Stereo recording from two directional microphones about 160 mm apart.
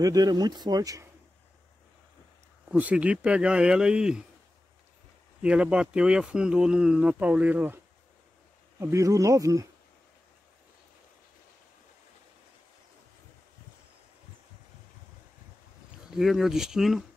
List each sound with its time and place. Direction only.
0.0 s speech: 25° right (ahead or behind)
2.7 s speech: 10° right (ahead or behind)
5.4 s speech: 5° right (ahead or behind)
16.1 s speech: centre (ahead or behind)